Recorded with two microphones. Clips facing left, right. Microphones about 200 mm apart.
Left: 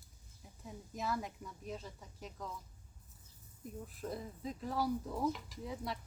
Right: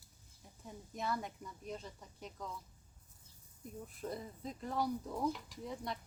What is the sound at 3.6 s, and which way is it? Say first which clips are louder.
Speech: even; centre (ahead or behind).